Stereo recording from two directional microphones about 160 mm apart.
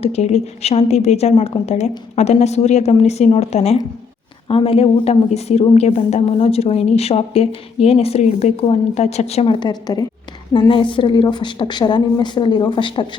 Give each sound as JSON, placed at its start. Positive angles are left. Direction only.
{"t": 0.0, "sound": "a woman's voice", "side_deg": 45}